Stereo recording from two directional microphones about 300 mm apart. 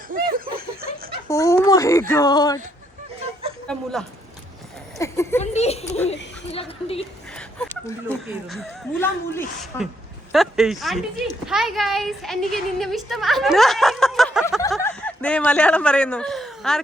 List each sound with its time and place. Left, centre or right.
0.1 s snicker: right
1.3 s speech: centre
4.9 s a sound: centre
5.4 s speech: left
7.3 s a sound: centre
8.0 s a woman's voice: centre